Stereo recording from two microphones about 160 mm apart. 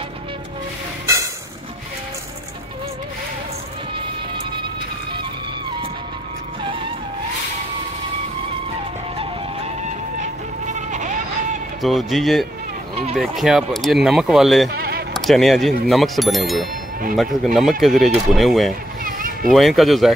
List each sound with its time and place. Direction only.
1.0 s a sound: 20° right (ahead or behind)
10.2 s music: 50° right (ahead or behind)
11.8 s speech: centre (ahead or behind)
14.7 s a sound: 80° right
15.1 s speech: centre (ahead or behind)
19.0 s vehicle: 60° right (ahead or behind)
19.5 s speech: centre (ahead or behind)